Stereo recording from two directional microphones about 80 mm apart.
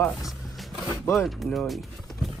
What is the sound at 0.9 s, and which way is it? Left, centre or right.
Speech, left.